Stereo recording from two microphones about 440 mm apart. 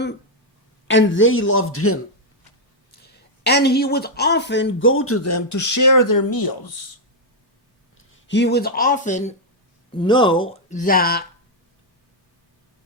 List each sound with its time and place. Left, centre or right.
0.9 s speech: left
7.9 s speech: left